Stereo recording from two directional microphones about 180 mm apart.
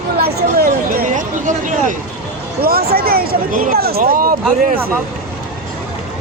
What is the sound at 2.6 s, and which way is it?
Speech, 60° right (ahead or behind).